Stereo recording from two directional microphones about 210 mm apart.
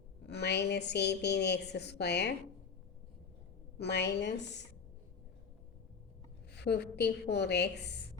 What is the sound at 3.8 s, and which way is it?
Speech, 50° left (ahead or behind).